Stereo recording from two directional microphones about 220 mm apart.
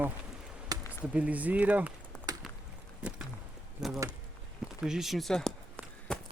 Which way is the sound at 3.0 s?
5° right (ahead or behind).